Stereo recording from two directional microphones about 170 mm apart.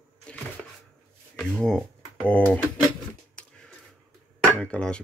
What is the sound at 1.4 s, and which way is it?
Speech, 5° left (ahead or behind).